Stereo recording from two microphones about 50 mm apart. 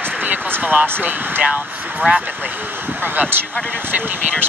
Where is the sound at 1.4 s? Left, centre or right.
Right.